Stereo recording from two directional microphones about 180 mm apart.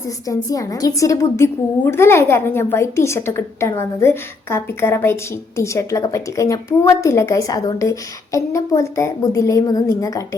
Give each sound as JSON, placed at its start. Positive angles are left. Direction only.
{"t": 0.3, "sound": "a woman's voice", "side_deg": 20}